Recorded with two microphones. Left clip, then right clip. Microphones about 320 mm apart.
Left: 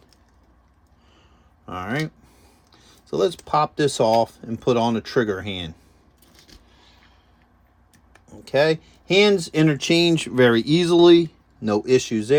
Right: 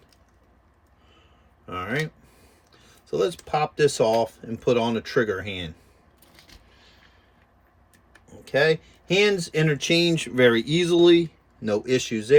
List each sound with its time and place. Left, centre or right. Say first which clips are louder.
1.6 s speech: left 1 dB; centre
3.1 s speech: left 3 dB; centre
8.5 s speech: left 2 dB; left
9.3 s speech: left 4 dB; centre